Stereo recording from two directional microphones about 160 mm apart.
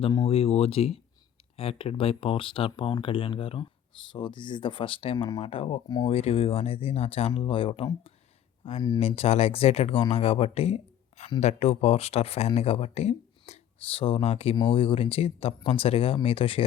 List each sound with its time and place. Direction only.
0.0 s speech: 25° left (ahead or behind)
0.3 s speech: 35° left (ahead or behind)